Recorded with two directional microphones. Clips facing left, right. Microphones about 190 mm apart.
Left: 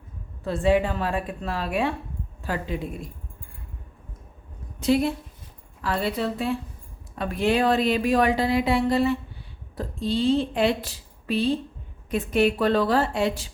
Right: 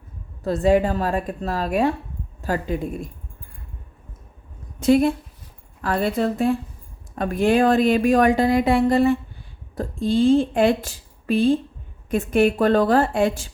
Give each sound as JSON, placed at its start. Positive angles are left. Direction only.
{"t": 0.4, "sound": "a woman's voice", "side_deg": -40}
{"t": 4.8, "sound": "speech", "side_deg": -50}